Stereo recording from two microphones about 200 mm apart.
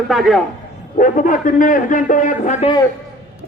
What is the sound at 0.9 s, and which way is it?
A man's voice, 40° left (ahead or behind).